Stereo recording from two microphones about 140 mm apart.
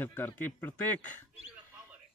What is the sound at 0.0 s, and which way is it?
Speech, 15° left (ahead or behind).